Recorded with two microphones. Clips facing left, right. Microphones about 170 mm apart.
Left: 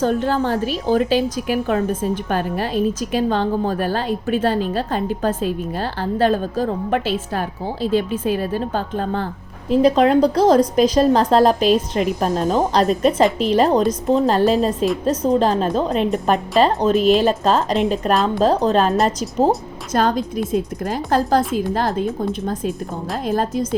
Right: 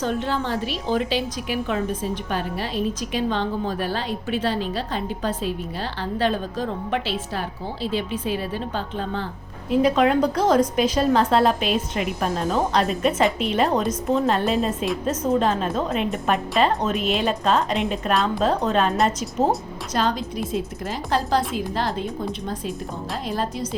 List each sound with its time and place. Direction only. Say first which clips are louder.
0.0 s a woman's voice: left 6 dB; 45° left (ahead or behind)
9.6 s a woman's voice: left 4 dB; 35° left (ahead or behind)
19.9 s a woman's voice: left 5 dB; 50° left (ahead or behind)